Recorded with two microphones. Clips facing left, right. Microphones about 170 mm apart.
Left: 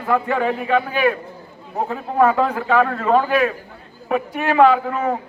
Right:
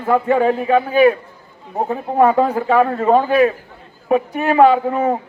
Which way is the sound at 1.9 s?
25° right (ahead or behind).